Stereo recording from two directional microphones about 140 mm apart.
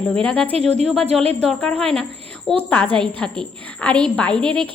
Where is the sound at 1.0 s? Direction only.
45° right (ahead or behind).